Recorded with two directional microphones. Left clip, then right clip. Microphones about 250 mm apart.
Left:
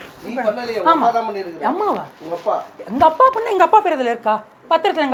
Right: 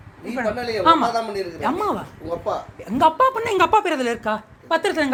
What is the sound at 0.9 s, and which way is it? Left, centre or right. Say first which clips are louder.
A woman's voice: left 3 dB; right.